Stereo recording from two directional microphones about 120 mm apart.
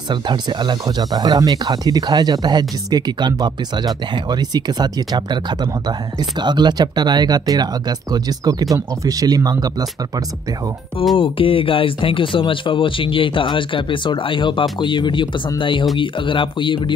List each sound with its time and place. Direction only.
0.1 s speech: 40° right (ahead or behind)
11.1 s speech: 50° left (ahead or behind)